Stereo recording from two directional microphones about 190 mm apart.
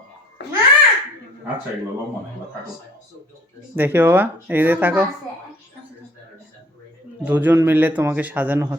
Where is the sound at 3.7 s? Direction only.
10° right (ahead or behind).